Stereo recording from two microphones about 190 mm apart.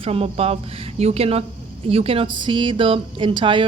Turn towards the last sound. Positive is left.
turn(degrees=-25)  # may be behind; listen again after turning